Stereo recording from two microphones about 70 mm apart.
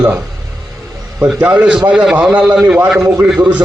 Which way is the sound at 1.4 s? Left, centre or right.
Centre.